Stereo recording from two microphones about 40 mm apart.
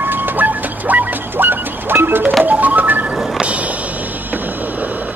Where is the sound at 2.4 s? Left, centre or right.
Right.